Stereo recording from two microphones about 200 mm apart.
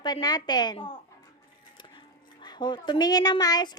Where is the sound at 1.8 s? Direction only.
20° left (ahead or behind).